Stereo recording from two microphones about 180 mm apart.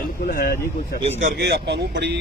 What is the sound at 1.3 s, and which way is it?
Speech, 70° right (ahead or behind).